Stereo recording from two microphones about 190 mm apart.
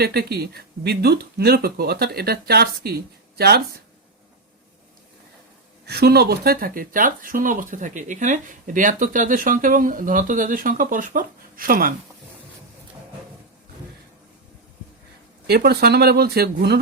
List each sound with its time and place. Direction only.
0.0 s speech: 55° right (ahead or behind)
5.8 s speech: 55° right (ahead or behind)
15.4 s speech: 55° right (ahead or behind)